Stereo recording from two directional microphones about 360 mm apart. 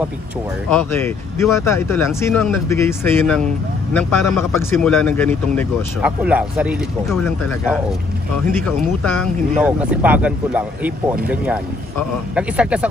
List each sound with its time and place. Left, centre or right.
0.7 s a man's voice: centre